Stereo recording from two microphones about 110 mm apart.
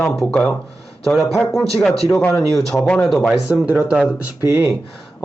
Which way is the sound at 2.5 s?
Centre (ahead or behind).